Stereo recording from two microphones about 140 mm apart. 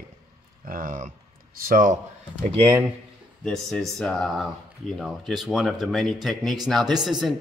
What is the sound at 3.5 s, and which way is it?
Speech, 5° left (ahead or behind).